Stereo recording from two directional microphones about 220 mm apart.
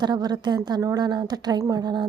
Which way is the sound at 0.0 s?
20° right (ahead or behind).